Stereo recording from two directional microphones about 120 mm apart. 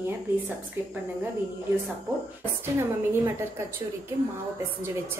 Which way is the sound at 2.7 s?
20° right (ahead or behind).